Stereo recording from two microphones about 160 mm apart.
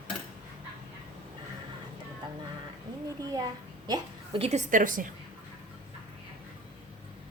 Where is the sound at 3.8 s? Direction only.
25° right (ahead or behind).